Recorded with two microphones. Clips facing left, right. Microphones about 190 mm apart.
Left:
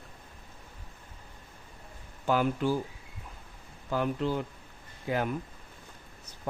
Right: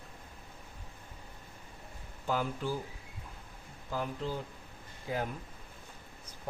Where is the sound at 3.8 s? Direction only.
70° left (ahead or behind).